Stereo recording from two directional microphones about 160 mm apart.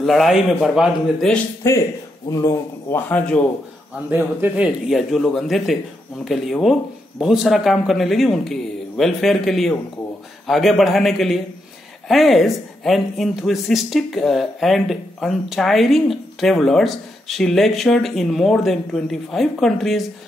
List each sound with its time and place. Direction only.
0.0 s speech: centre (ahead or behind)
2.3 s a man's voice: 20° left (ahead or behind)
4.1 s speech: 10° right (ahead or behind)